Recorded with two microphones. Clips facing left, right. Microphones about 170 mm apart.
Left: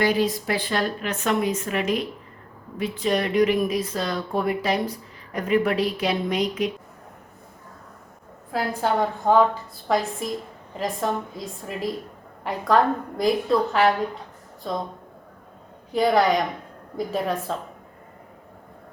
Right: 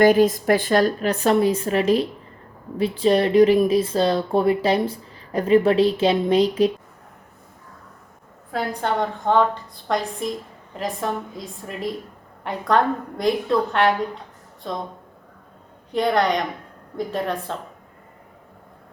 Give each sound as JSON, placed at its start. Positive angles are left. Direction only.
{"t": 0.0, "sound": "a woman's voice", "side_deg": -50}
{"t": 8.5, "sound": "a woman's voice", "side_deg": 5}
{"t": 15.9, "sound": "a woman's voice", "side_deg": 0}